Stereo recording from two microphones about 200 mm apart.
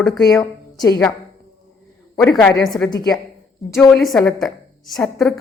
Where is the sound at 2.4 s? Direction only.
5° left (ahead or behind).